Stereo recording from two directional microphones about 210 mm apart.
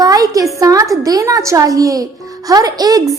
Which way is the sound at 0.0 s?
15° right (ahead or behind).